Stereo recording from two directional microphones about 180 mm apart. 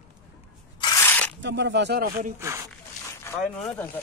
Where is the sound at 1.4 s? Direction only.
80° right; by 2.3 s 55° right (ahead or behind).